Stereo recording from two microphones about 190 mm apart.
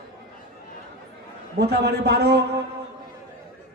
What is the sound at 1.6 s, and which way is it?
Speech, 60° right (ahead or behind).